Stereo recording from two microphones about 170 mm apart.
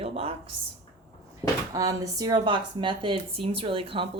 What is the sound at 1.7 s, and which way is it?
Speech, 20° right (ahead or behind).